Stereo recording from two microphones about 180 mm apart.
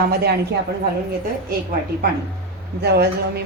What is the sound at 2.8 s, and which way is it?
Speech, 65° right (ahead or behind).